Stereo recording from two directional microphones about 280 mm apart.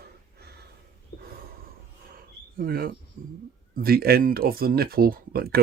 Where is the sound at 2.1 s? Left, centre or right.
Right.